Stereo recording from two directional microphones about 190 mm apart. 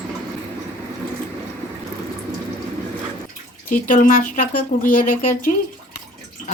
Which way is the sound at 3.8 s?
45° left (ahead or behind).